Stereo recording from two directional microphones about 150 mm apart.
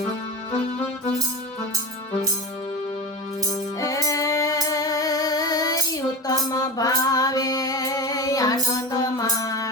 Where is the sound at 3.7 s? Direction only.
20° left (ahead or behind).